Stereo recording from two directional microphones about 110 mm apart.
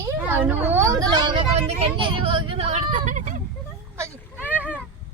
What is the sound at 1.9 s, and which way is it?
Vehicle, 50° right (ahead or behind).